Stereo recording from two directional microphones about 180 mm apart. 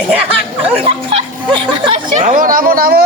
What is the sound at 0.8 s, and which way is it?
Speech, 30° right (ahead or behind).